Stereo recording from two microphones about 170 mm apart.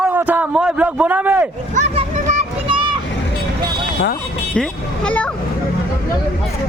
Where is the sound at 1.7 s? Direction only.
45° right (ahead or behind).